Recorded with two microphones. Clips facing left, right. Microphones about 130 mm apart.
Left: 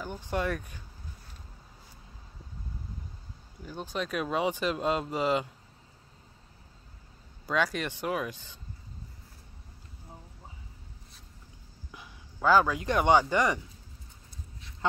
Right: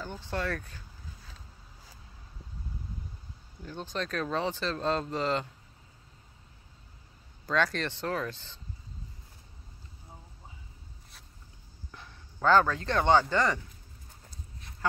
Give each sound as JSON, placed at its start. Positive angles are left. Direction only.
{"t": 0.0, "sound": "speech", "side_deg": 15}
{"t": 3.6, "sound": "speech", "side_deg": 10}
{"t": 7.4, "sound": "speech", "side_deg": 10}
{"t": 11.9, "sound": "speech", "side_deg": 10}